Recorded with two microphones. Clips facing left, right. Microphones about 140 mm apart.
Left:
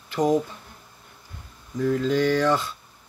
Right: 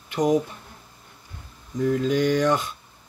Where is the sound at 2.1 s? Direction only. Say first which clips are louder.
Even; 15° right (ahead or behind).